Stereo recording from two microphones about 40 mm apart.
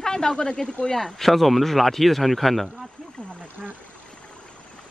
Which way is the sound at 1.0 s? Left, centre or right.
Centre.